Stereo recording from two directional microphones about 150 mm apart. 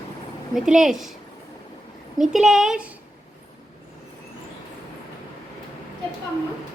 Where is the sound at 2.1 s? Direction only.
Centre (ahead or behind).